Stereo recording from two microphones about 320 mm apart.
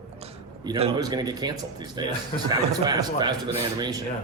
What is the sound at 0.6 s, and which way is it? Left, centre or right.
A man's voice, centre.